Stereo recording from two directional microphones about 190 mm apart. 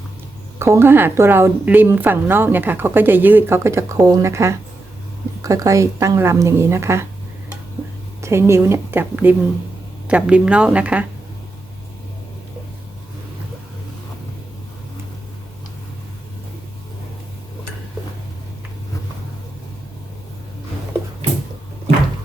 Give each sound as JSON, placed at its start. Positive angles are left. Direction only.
{"t": 0.6, "sound": "a woman's voice", "side_deg": -15}
{"t": 8.2, "sound": "a woman's voice", "side_deg": -15}